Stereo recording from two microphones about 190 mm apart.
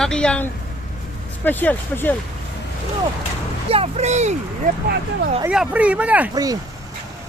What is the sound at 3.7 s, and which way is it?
Speech, 35° right (ahead or behind).